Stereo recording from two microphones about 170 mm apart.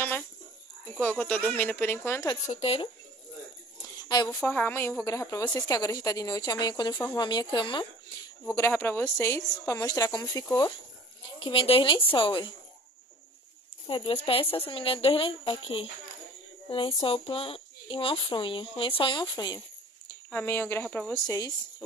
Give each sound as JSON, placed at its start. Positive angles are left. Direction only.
{"t": 0.9, "sound": "a woman's voice", "side_deg": 5}
{"t": 2.4, "sound": "speech", "side_deg": 35}
{"t": 4.4, "sound": "a woman's voice", "side_deg": 10}
{"t": 8.5, "sound": "a woman's voice", "side_deg": 15}
{"t": 11.3, "sound": "a woman's voice", "side_deg": 30}
{"t": 13.8, "sound": "speech", "side_deg": 30}
{"t": 20.2, "sound": "a woman's voice", "side_deg": 10}
{"t": 21.3, "sound": "a woman's voice", "side_deg": 20}